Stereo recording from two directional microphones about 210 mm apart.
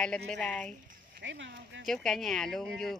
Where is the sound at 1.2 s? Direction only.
60° right (ahead or behind).